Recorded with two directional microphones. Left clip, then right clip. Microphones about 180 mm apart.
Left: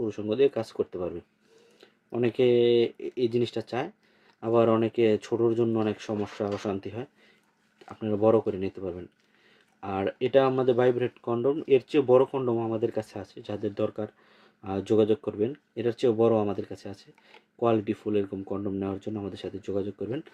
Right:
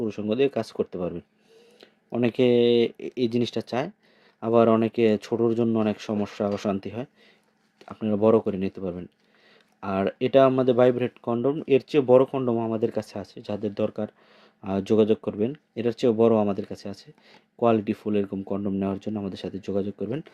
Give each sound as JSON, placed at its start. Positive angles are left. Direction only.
{"t": 0.0, "sound": "speech", "side_deg": -40}